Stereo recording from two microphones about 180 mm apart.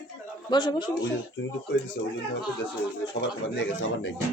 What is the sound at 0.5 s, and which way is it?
Speech, 25° left (ahead or behind).